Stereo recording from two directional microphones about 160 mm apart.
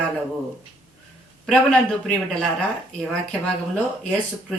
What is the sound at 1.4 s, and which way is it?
A man's voice, 5° left (ahead or behind).